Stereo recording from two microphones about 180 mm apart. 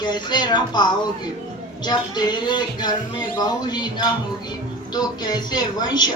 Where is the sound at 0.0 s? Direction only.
25° left (ahead or behind).